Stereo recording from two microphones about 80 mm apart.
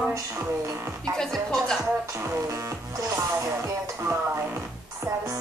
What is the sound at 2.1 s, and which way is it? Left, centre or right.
Music, right.